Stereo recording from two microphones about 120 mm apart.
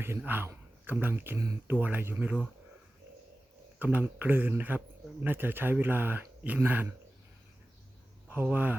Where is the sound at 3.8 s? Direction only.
15° right (ahead or behind).